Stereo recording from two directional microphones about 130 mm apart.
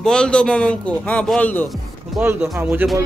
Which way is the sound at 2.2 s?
20° right (ahead or behind).